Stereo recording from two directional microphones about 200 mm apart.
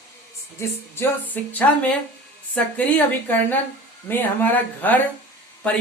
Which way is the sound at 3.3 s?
10° left (ahead or behind).